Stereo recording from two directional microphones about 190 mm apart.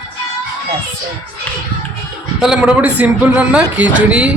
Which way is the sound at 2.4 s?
5° right (ahead or behind).